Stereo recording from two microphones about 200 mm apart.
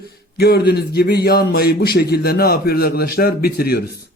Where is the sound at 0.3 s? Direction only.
50° left (ahead or behind).